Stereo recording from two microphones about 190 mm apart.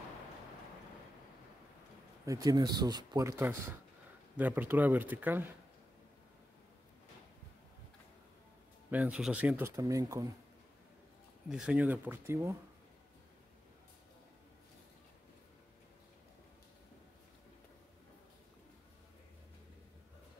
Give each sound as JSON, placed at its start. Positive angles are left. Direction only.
{"t": 2.2, "sound": "speech", "side_deg": -20}
{"t": 8.9, "sound": "speech", "side_deg": -5}
{"t": 11.4, "sound": "speech", "side_deg": -5}